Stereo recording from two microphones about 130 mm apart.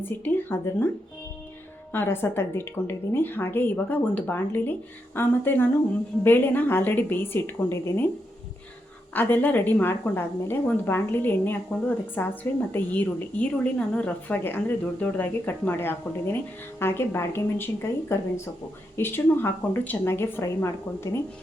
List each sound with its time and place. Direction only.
0.0 s a woman's voice: 15° left (ahead or behind)
1.9 s a woman's voice: 15° left (ahead or behind)
9.1 s a woman's voice: 15° left (ahead or behind)